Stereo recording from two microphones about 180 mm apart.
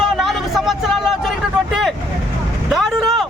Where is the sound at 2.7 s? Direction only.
Centre (ahead or behind).